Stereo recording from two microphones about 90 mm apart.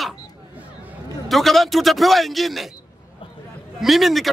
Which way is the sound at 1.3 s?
Centre (ahead or behind).